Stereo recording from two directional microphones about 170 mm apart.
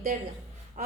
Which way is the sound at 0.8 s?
50° right (ahead or behind).